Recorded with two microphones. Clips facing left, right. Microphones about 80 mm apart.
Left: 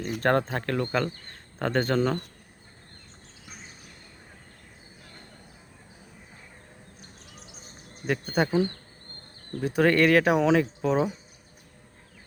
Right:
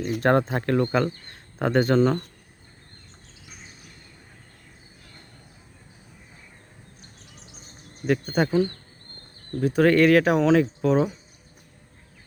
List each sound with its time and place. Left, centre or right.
0.0 s speech: centre
8.0 s speech: centre
8.4 s speech: centre
9.6 s speech: centre